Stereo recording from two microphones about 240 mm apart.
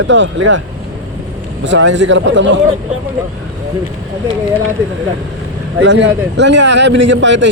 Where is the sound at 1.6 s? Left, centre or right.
Right.